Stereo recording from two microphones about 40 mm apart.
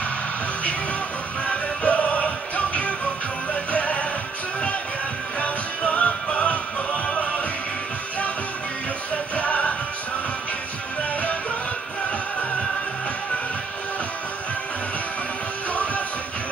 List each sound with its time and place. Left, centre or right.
1.4 s music: left
5.4 s music: left
9.3 s music: left
15.7 s music: left